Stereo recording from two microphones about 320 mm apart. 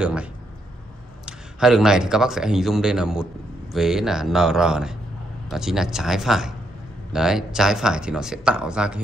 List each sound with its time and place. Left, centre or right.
0.0 s a man's voice: centre